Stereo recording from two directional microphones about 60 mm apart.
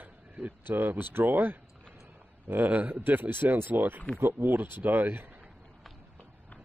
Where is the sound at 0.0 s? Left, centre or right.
Right.